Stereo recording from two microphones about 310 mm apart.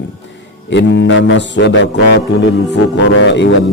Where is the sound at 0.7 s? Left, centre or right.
Left.